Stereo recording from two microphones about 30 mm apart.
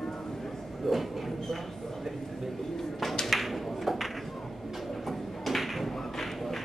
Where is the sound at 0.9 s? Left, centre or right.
Centre.